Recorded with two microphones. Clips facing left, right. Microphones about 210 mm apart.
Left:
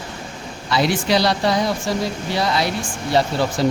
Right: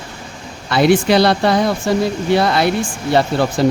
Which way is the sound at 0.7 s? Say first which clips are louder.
Right 6 dB; 55° right (ahead or behind).